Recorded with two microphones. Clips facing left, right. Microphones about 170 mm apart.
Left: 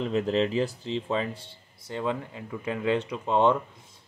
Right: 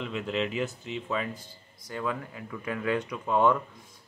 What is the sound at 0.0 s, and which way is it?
Speech, 35° left (ahead or behind).